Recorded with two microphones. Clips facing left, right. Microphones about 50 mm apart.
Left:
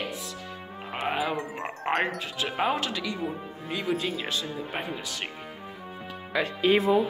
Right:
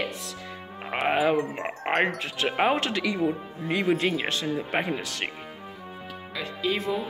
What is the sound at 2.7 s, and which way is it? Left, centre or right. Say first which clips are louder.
Speech: right 4 dB; right.